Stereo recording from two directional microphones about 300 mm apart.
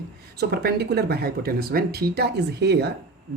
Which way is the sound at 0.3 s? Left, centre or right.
Right.